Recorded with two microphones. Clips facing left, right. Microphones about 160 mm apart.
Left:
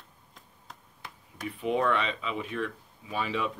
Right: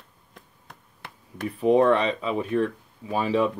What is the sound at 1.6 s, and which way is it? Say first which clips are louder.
Speech: right 9 dB; 35° right (ahead or behind).